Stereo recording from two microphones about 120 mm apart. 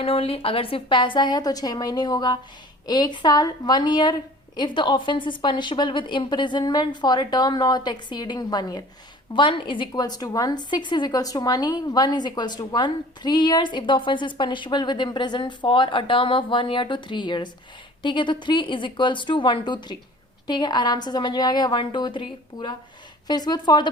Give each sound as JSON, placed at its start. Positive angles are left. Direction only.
{"t": 0.0, "sound": "a woman's voice", "side_deg": 50}